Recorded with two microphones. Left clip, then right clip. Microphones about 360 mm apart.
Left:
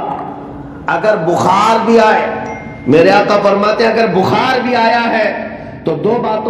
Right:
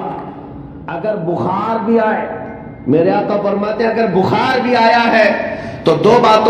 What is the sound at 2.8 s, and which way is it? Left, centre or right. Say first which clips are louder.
A man's voice: left 5 dB; left.